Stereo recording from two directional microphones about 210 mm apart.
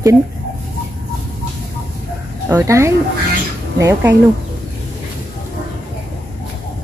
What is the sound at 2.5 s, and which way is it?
Speech, 10° right (ahead or behind).